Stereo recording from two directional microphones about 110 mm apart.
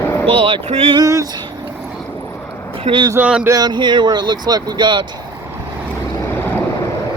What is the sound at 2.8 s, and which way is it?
Speech, 50° right (ahead or behind).